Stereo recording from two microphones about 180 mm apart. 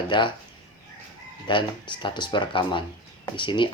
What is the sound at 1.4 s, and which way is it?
Speech, 25° left (ahead or behind).